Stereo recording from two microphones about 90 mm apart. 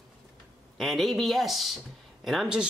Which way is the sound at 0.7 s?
Centre (ahead or behind).